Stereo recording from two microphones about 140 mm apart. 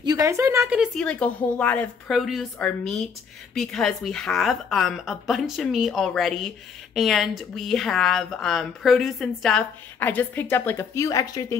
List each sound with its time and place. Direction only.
0.0 s a woman's voice: 25° right (ahead or behind)
0.9 s a woman's voice: 5° left (ahead or behind)
2.0 s speech: centre (ahead or behind); by 11.5 s 25° left (ahead or behind)